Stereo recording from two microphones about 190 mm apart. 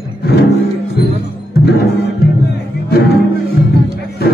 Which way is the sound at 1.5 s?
60° left (ahead or behind).